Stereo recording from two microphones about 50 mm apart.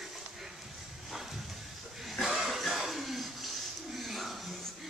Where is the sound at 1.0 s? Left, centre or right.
Centre.